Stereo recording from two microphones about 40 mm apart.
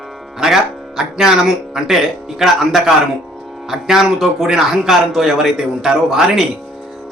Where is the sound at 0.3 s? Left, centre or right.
Centre.